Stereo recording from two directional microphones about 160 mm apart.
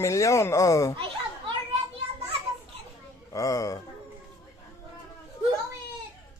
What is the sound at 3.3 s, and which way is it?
Speech, 20° left (ahead or behind).